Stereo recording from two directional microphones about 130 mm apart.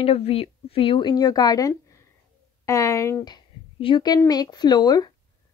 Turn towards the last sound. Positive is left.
turn(degrees=30)  # may be behind; listen again after turning